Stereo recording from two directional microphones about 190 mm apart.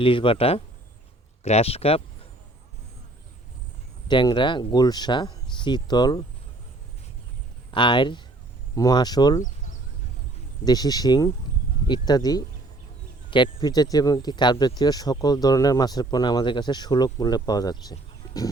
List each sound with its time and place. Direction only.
0.0 s speech: 25° left (ahead or behind)
4.1 s speech: 25° left (ahead or behind)
7.7 s speech: 25° left (ahead or behind)
10.7 s speech: 20° left (ahead or behind)